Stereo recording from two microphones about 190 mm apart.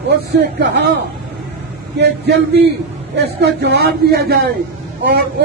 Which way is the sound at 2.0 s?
60° right (ahead or behind).